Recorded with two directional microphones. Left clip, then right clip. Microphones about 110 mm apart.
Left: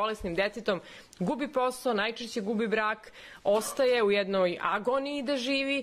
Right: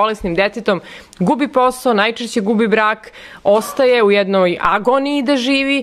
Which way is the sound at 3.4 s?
20° right (ahead or behind).